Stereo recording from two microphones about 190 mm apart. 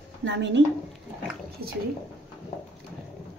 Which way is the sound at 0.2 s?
65° right (ahead or behind).